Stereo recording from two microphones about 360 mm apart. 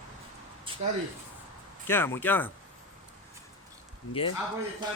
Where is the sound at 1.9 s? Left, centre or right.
Centre.